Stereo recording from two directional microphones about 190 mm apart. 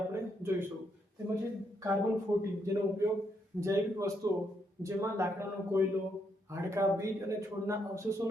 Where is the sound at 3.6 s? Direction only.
15° right (ahead or behind).